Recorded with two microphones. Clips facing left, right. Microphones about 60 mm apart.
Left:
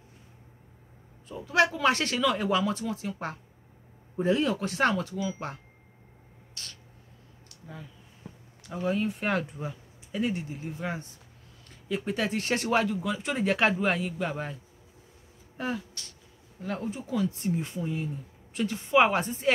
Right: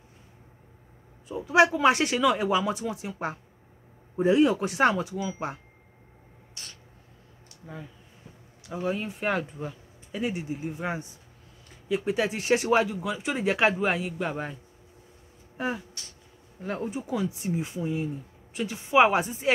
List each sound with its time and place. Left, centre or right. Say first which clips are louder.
1.3 s speech: right 4 dB; centre
6.5 s a sound: left 1 dB; centre
8.6 s speech: left 1 dB; centre
11.9 s speech: right 3 dB; centre